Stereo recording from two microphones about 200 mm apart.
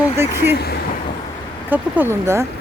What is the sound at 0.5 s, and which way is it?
Speech, 50° left (ahead or behind).